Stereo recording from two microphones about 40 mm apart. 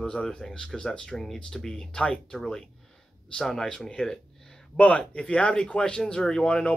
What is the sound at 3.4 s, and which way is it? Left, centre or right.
Speech, centre.